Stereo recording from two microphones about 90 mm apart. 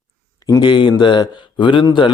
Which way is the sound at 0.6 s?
60° left (ahead or behind).